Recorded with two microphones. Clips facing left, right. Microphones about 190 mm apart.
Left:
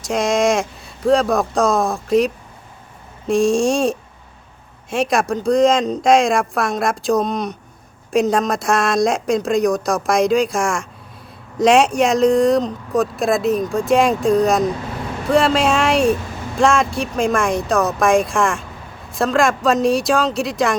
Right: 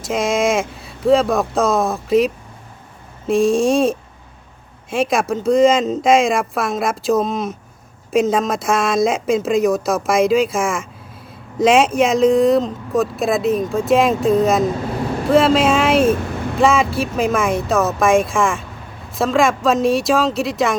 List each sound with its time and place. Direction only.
0.0 s speech: centre (ahead or behind)